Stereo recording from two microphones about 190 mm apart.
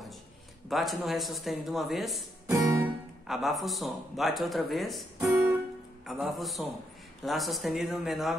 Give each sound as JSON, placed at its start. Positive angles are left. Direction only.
{"t": 0.7, "sound": "speech", "side_deg": 0}
{"t": 2.5, "sound": "guitar", "side_deg": -15}
{"t": 3.3, "sound": "speech", "side_deg": 0}
{"t": 6.0, "sound": "speech", "side_deg": 0}